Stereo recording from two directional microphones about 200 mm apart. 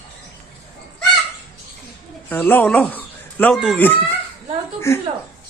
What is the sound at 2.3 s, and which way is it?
A man's voice, 10° left (ahead or behind).